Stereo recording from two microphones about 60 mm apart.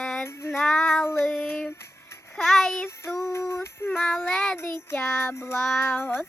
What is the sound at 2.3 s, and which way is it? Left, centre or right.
Speech, centre.